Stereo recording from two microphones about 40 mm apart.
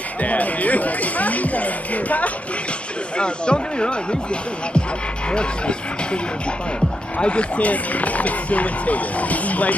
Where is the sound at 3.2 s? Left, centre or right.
Left.